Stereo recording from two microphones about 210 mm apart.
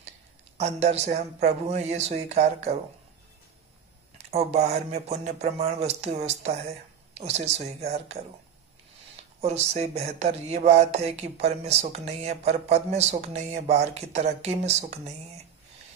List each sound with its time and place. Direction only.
0.6 s speech: 30° right (ahead or behind)
4.3 s speech: 30° right (ahead or behind)
9.4 s speech: 30° right (ahead or behind)